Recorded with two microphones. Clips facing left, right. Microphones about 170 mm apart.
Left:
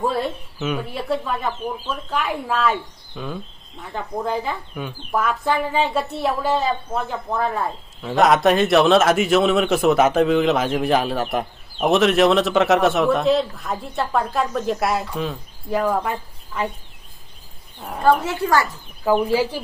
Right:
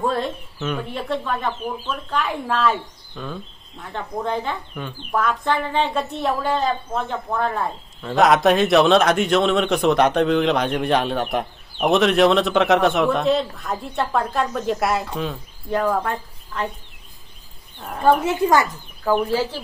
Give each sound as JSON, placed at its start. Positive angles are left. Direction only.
{"t": 0.0, "sound": "speech", "side_deg": 5}
{"t": 18.0, "sound": "speech", "side_deg": -15}
{"t": 19.2, "sound": "speech", "side_deg": 10}